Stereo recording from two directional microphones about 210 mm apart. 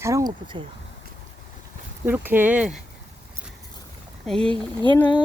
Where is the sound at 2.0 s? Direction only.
10° right (ahead or behind).